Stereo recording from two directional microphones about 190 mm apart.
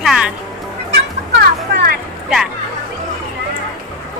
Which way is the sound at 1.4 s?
60° right (ahead or behind).